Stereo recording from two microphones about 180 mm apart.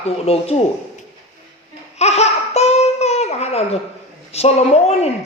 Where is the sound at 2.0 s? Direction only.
35° left (ahead or behind).